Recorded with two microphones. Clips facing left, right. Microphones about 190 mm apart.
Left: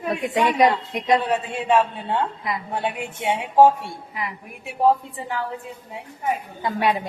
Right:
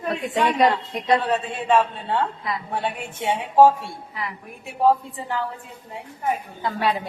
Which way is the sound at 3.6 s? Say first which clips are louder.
Even; 15° left (ahead or behind).